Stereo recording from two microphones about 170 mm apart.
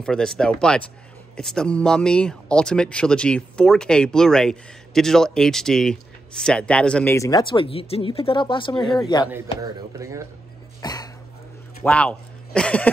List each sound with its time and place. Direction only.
0.0 s speech: 5° left (ahead or behind)
7.2 s speech: 20° left (ahead or behind)
9.6 s speech: 20° right (ahead or behind)
10.8 s cough: 20° left (ahead or behind)
11.8 s speech: 5° left (ahead or behind)